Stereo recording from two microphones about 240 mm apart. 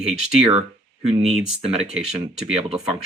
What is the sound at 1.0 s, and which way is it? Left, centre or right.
Speech, right.